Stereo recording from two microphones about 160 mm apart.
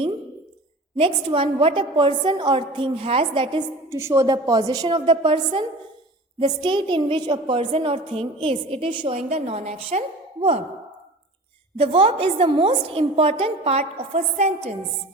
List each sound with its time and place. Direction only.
0.9 s a woman's voice: 35° right (ahead or behind)
3.8 s a woman's voice: 15° right (ahead or behind)
9.1 s a woman's voice: 40° right (ahead or behind)
11.8 s a woman's voice: 35° right (ahead or behind)